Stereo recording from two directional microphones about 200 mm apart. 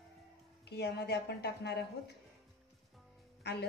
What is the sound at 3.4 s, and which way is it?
Speech, 55° left (ahead or behind).